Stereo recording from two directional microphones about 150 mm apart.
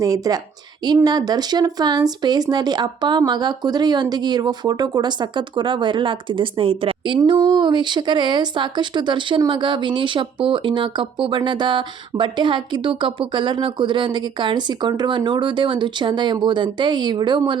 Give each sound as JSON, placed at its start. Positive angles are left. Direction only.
{"t": 0.0, "sound": "a woman's voice", "side_deg": -25}